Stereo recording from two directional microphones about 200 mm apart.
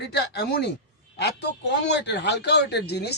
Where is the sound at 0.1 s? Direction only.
55° left (ahead or behind).